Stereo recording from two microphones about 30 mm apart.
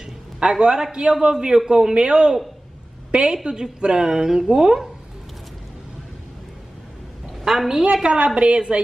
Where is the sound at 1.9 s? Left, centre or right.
Right.